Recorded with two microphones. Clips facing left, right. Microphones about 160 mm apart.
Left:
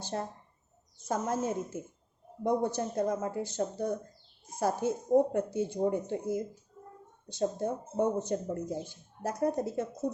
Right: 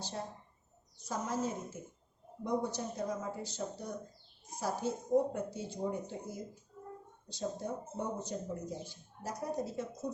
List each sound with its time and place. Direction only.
0.0 s a woman's voice: 55° left (ahead or behind)